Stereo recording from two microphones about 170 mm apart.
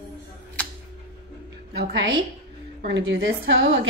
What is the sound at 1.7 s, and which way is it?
A woman's voice, 90° right.